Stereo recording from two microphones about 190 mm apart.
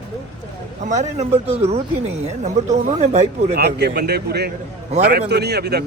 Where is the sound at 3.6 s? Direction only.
60° right (ahead or behind).